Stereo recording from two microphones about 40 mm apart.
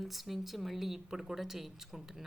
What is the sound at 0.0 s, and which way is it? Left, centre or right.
Speech, centre.